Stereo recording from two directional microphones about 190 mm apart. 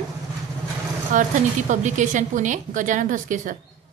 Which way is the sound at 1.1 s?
40° right (ahead or behind).